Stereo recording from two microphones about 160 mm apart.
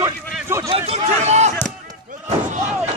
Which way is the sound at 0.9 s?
45° right (ahead or behind).